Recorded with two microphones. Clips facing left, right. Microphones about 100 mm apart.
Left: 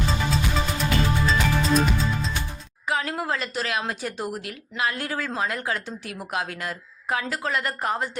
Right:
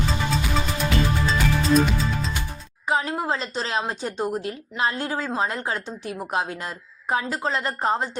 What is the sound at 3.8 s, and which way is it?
A woman's voice, 25° right (ahead or behind).